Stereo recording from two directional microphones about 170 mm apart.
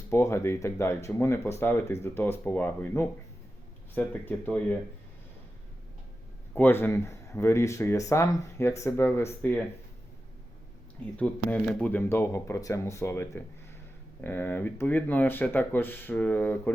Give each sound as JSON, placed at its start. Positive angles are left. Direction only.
{"t": 0.1, "sound": "speech", "side_deg": 15}
{"t": 6.5, "sound": "speech", "side_deg": 10}
{"t": 11.2, "sound": "speech", "side_deg": 10}